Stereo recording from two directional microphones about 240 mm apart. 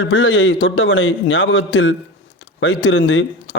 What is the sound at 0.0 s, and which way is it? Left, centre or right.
A man's voice, left.